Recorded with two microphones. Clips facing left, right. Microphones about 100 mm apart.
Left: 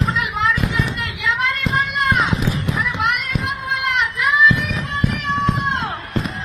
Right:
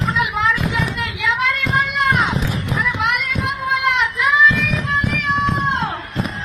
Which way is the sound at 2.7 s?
Centre (ahead or behind).